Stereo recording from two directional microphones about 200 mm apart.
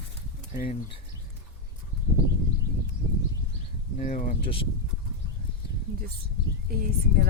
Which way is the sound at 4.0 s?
40° left (ahead or behind).